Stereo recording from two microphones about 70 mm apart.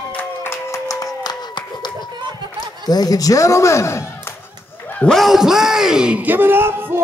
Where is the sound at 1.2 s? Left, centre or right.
Left.